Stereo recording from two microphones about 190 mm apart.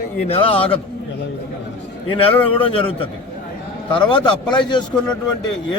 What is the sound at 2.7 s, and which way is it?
A man's voice, 30° left (ahead or behind).